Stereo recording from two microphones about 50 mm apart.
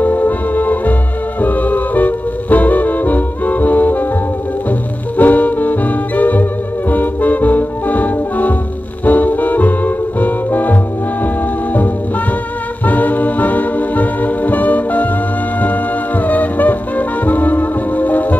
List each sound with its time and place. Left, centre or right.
0.0 s music: left
12.8 s music: left
16.3 s music: left